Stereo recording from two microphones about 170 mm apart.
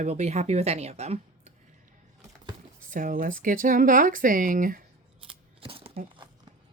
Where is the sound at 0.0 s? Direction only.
40° right (ahead or behind).